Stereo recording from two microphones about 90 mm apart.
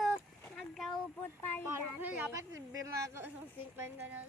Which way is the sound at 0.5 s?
5° left (ahead or behind).